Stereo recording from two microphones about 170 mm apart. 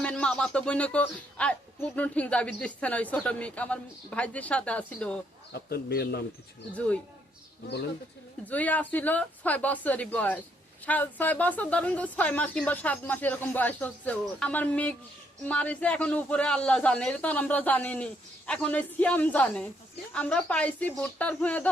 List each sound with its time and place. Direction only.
0.0 s speech: 5° left (ahead or behind)
5.5 s speech: 70° left (ahead or behind)
6.7 s speech: 10° left (ahead or behind)
8.4 s speech: 10° left (ahead or behind)